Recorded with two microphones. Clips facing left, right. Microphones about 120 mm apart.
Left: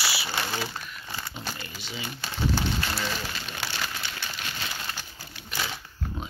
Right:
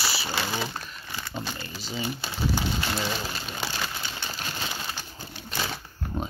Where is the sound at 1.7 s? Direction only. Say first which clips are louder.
Right 4 dB; 40° right (ahead or behind).